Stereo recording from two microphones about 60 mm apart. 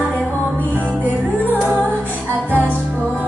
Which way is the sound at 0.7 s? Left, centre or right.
Right.